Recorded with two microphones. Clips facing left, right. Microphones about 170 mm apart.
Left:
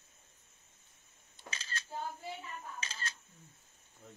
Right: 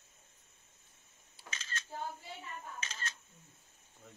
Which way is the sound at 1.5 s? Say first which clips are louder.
Left 1 dB; 35° left (ahead or behind).